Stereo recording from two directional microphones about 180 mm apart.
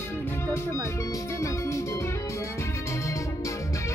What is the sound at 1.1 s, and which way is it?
Music, 15° left (ahead or behind).